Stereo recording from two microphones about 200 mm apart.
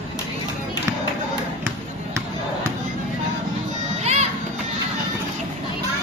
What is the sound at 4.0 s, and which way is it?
Children playing, 35° right (ahead or behind).